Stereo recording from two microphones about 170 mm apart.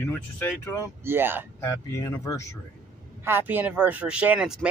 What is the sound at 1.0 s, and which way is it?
Speech, 15° right (ahead or behind).